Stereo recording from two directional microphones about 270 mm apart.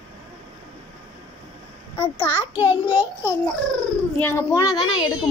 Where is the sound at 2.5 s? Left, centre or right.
Centre.